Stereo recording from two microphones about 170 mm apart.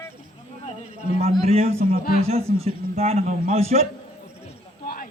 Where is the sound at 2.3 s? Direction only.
35° right (ahead or behind).